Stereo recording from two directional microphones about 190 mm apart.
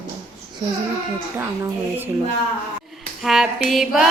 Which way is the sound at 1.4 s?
10° right (ahead or behind).